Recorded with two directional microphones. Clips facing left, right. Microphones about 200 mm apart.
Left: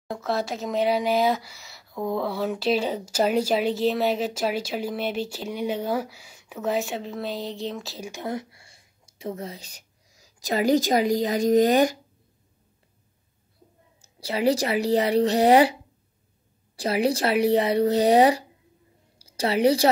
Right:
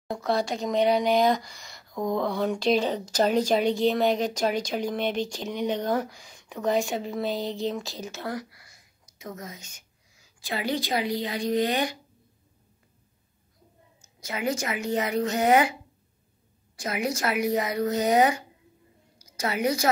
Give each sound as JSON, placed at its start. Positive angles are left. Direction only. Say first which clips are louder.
{"t": 0.1, "sound": "speech", "louder": "right 1 dB", "side_deg": 0}
{"t": 8.1, "sound": "speech", "louder": "left 4 dB", "side_deg": 20}
{"t": 14.0, "sound": "speech", "louder": "left 7 dB", "side_deg": 35}
{"t": 16.7, "sound": "a woman's voice", "louder": "left 6 dB", "side_deg": 35}